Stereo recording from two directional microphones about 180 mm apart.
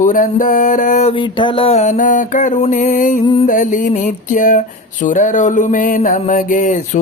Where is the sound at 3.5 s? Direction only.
45° left (ahead or behind).